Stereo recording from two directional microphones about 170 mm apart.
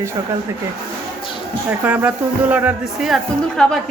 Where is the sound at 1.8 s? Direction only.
10° right (ahead or behind).